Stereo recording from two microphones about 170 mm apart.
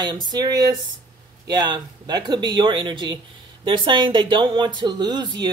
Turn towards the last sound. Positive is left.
turn(degrees=-25)  # may be behind; listen again after turning